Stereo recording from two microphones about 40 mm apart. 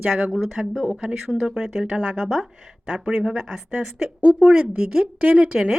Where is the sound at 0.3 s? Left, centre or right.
Centre.